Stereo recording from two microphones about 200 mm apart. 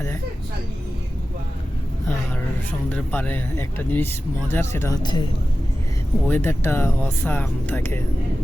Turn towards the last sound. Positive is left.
turn(degrees=10)  # may be behind; listen again after turning